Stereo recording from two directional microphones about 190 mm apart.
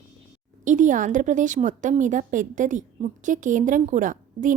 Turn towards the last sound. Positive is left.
turn(degrees=-45)  # may be behind; listen again after turning